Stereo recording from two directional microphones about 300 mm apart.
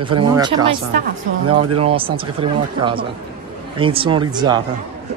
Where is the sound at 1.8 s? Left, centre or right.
Centre.